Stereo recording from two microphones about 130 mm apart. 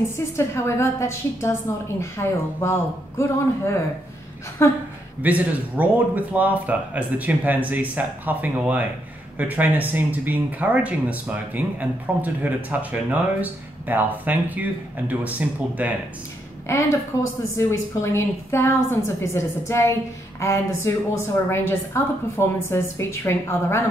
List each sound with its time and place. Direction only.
0.4 s a woman's voice: 20° left (ahead or behind)
5.2 s speech: 10° right (ahead or behind)
16.7 s a woman's voice: 20° left (ahead or behind)